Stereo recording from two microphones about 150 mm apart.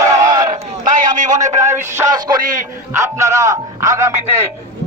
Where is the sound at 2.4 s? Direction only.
60° right (ahead or behind).